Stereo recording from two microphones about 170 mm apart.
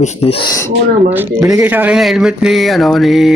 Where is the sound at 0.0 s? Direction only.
35° left (ahead or behind).